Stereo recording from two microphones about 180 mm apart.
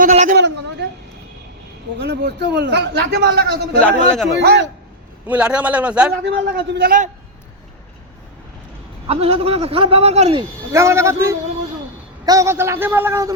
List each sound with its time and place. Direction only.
0.0 s a man's voice: 45° right (ahead or behind)
0.3 s a sound: 75° right (ahead or behind)
2.0 s a man's voice: 70° right (ahead or behind)
3.8 s a man's voice: 5° left (ahead or behind)
4.4 s a man's voice: 75° right (ahead or behind)
5.2 s a man's voice: 5° right (ahead or behind)
6.2 s a man's voice: 70° right (ahead or behind)
9.0 s a man's voice: 35° right (ahead or behind)
10.7 s a man's voice: 15° right (ahead or behind)